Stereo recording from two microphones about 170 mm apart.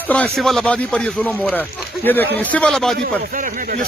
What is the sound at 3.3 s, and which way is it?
Speech, 50° right (ahead or behind).